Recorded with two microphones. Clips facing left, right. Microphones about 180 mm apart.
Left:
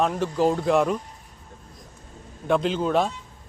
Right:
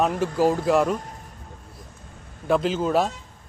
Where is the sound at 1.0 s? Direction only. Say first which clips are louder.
Right 3 dB; 80° right.